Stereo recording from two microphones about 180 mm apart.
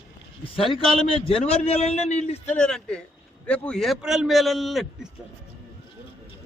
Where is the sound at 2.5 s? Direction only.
5° left (ahead or behind).